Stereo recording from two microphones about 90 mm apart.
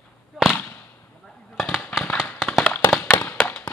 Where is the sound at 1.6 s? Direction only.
5° right (ahead or behind).